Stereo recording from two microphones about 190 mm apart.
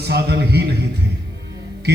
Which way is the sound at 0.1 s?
60° right (ahead or behind).